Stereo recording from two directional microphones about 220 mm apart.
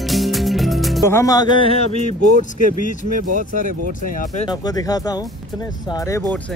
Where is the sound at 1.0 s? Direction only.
15° left (ahead or behind); by 4.5 s 35° left (ahead or behind).